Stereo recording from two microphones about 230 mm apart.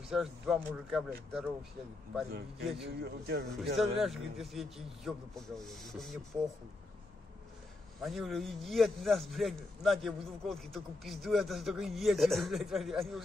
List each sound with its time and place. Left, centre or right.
0.1 s a man's voice: centre
2.6 s a man's voice: centre
3.0 s a man's voice: right
3.7 s a man's voice: centre
8.0 s a man's voice: centre